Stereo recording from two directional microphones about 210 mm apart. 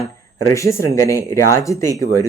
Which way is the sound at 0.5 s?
15° left (ahead or behind).